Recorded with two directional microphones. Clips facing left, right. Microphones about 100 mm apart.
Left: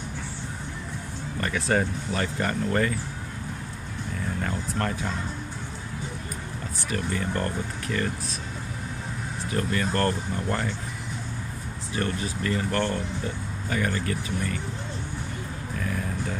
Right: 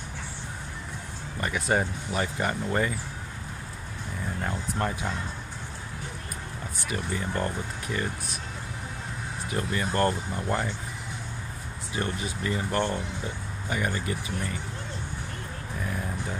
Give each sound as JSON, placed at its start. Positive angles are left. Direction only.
{"t": 1.4, "sound": "speech", "side_deg": -15}
{"t": 4.4, "sound": "speech", "side_deg": -15}
{"t": 6.9, "sound": "speech", "side_deg": -15}
{"t": 9.5, "sound": "speech", "side_deg": -20}
{"t": 11.9, "sound": "speech", "side_deg": -20}